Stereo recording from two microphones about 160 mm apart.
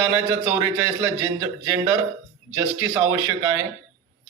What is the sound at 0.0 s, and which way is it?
A man's voice, 15° right (ahead or behind).